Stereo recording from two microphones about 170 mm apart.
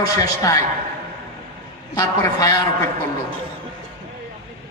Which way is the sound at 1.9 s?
20° left (ahead or behind).